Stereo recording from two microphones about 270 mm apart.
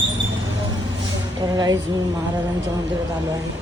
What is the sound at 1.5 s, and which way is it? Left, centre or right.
Speech, centre.